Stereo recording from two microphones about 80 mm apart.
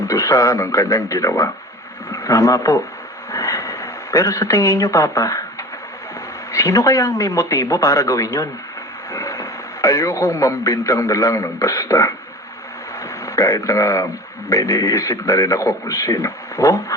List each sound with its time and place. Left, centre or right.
0.1 s a man's voice: left
3.3 s a sound: left
6.5 s a man's voice: left
13.2 s a man's voice: left